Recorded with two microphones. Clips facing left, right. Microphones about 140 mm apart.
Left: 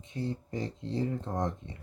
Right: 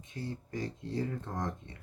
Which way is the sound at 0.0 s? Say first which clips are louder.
Left 5 dB; 25° left (ahead or behind).